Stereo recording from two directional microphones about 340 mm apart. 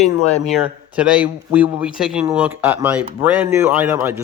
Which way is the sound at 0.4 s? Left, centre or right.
Centre.